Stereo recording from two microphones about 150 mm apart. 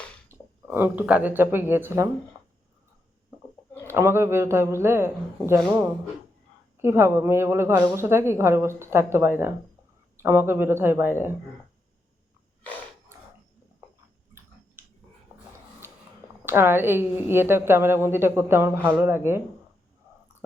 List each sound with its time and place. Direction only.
0.3 s speech: 15° right (ahead or behind)
3.8 s a woman's voice: 15° right (ahead or behind)
6.7 s a woman's voice: 15° right (ahead or behind)
16.5 s a woman's voice: 15° right (ahead or behind)